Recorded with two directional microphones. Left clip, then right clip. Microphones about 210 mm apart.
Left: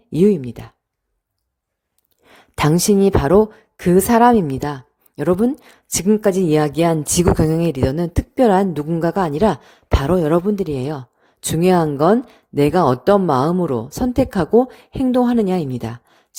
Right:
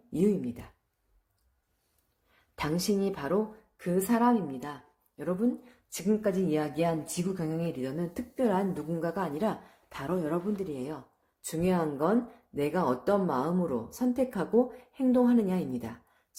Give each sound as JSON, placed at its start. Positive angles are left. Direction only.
{"t": 0.1, "sound": "a woman's voice", "side_deg": 45}
{"t": 2.3, "sound": "a woman's voice", "side_deg": 50}